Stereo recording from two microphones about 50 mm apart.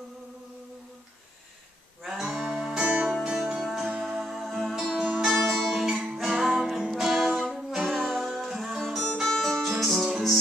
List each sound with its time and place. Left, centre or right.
2.0 s music: centre
2.7 s music: centre
3.6 s music: centre
4.9 s music: centre
5.2 s music: centre
8.1 s music: centre